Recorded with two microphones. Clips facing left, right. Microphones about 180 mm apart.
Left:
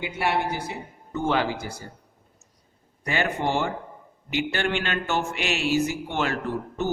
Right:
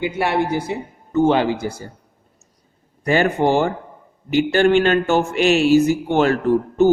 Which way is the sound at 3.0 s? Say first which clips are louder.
Right 9 dB; 40° right (ahead or behind).